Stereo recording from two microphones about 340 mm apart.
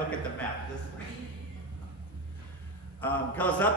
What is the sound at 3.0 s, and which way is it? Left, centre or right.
Speech, centre.